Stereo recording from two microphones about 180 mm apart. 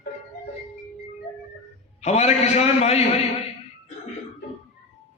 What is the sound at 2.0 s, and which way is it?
A man's voice, 40° left (ahead or behind).